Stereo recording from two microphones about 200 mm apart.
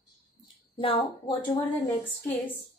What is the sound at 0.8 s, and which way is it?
Speech, 25° left (ahead or behind).